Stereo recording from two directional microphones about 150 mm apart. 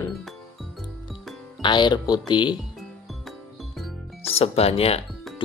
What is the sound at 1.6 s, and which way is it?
Speech, 30° left (ahead or behind).